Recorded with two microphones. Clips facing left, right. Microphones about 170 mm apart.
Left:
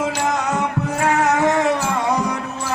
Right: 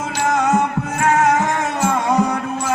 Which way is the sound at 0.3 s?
45° right (ahead or behind).